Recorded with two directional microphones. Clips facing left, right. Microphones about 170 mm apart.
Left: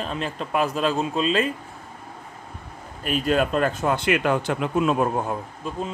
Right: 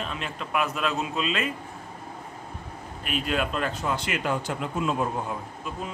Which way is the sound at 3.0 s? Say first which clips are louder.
Left 6 dB; 40° left (ahead or behind).